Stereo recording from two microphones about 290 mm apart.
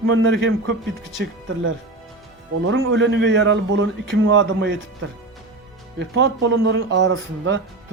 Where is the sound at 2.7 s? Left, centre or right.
Right.